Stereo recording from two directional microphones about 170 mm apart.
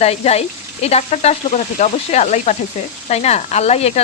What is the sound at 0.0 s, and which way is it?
Speech, 40° left (ahead or behind).